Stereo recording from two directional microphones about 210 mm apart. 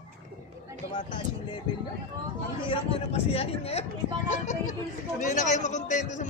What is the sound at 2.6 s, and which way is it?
A man's voice, 25° left (ahead or behind).